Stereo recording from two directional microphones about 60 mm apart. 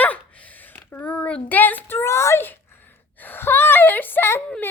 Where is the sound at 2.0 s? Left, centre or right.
Left.